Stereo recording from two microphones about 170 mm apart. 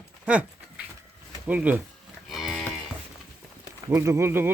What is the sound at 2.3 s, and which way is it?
Moo, centre (ahead or behind).